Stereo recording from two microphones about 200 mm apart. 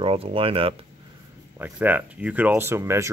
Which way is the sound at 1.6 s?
10° right (ahead or behind).